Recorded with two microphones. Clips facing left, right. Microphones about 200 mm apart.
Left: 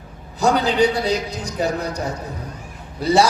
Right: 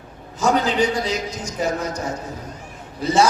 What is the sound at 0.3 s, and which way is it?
A man's voice, 35° left (ahead or behind).